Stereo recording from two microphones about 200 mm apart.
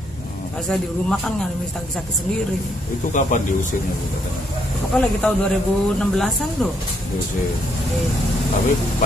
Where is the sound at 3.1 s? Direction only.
40° left (ahead or behind).